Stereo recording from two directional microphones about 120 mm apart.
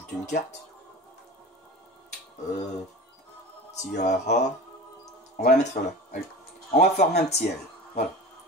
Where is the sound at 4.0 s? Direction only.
75° left (ahead or behind).